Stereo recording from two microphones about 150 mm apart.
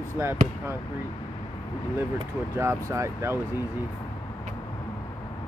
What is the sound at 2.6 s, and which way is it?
Speech, 20° right (ahead or behind).